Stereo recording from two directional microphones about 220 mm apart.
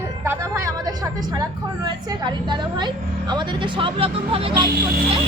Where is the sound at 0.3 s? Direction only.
15° right (ahead or behind).